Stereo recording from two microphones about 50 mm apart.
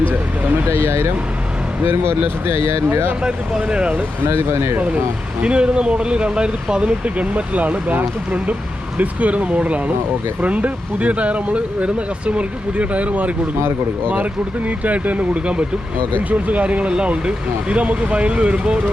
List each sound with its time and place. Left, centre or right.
0.7 s speech: right
3.2 s speech: centre
4.3 s speech: right
5.4 s speech: right